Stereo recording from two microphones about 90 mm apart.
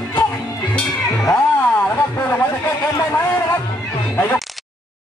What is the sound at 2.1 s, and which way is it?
Speech, 30° left (ahead or behind).